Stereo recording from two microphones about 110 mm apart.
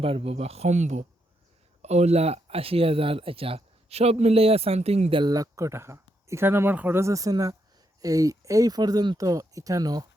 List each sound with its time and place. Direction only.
0.0 s speech: 60° right (ahead or behind)
5.3 s speech: 30° right (ahead or behind)